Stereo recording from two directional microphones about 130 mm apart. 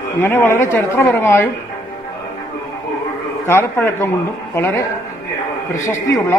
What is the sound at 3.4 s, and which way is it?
A woman's voice, 20° left (ahead or behind).